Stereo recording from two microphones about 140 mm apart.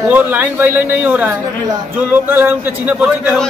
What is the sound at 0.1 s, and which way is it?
A man's voice, 10° right (ahead or behind).